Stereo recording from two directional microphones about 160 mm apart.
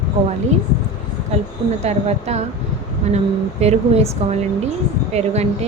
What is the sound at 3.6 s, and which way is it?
A woman's voice, 40° right (ahead or behind).